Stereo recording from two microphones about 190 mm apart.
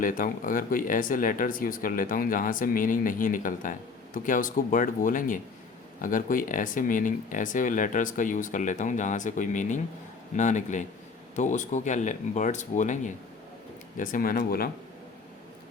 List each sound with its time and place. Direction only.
0.0 s speech: 45° left (ahead or behind)